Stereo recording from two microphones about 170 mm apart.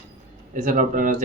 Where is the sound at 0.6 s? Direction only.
50° right (ahead or behind).